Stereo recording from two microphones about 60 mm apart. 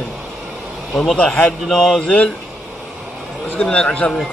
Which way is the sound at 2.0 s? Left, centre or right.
Left.